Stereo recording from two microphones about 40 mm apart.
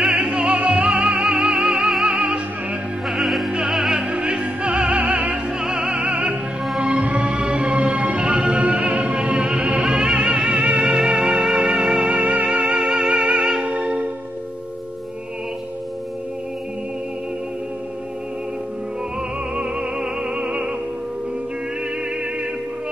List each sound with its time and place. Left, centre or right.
0.1 s music: centre
2.2 s music: right
3.1 s opera: centre
4.1 s music: right
9.4 s music: centre
10.5 s music: right
10.9 s music: centre
12.1 s music: right
12.4 s music: centre
13.7 s meow: right
19.5 s music: right